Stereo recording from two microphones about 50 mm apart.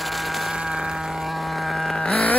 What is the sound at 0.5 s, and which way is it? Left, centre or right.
Sheep, centre.